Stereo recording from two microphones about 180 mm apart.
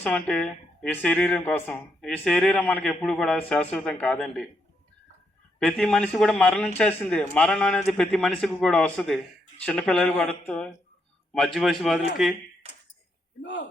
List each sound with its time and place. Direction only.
0.0 s speech: 5° left (ahead or behind)
5.5 s speech: 5° left (ahead or behind)
13.4 s a man's voice: 75° left (ahead or behind)